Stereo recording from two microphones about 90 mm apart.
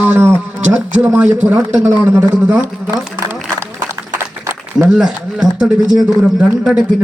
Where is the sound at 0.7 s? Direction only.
15° right (ahead or behind).